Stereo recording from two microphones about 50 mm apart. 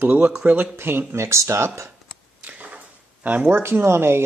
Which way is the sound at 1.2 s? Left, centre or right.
Right.